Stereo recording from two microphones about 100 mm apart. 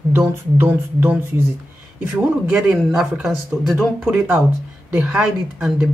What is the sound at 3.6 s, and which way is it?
Speech, centre (ahead or behind).